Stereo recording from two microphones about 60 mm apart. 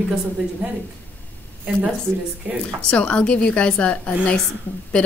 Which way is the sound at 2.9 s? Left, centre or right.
Centre.